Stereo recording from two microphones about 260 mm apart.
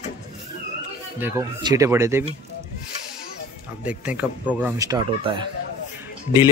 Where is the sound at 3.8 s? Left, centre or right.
Centre.